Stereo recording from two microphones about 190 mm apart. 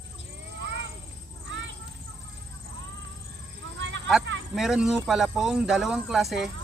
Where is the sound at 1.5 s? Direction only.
75° right (ahead or behind).